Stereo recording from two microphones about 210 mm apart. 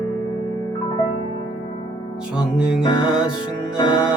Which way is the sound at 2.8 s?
20° left (ahead or behind).